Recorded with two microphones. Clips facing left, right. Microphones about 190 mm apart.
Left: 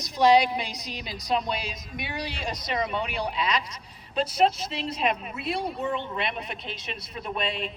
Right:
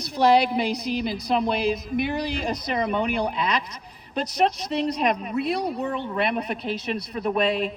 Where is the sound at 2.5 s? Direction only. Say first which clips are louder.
Right 2 dB; 50° right (ahead or behind).